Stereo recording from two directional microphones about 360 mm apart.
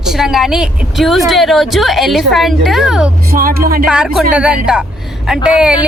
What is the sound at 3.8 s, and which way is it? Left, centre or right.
Speech, centre.